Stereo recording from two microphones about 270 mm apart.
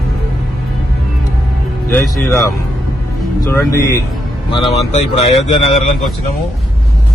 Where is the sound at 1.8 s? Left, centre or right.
Centre.